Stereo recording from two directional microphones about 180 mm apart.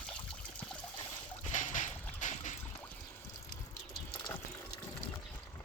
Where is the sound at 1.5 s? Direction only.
45° left (ahead or behind).